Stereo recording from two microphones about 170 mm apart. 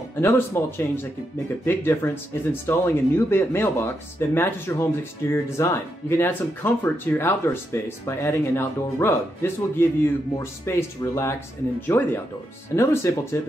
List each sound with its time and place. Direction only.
0.1 s speech: 15° left (ahead or behind)